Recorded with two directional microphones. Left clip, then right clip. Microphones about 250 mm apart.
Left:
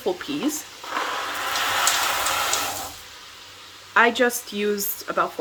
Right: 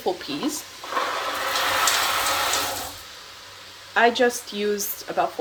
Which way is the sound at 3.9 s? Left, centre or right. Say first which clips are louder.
Left 1 dB; centre.